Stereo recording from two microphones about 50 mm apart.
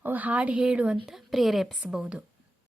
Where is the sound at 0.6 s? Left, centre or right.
Centre.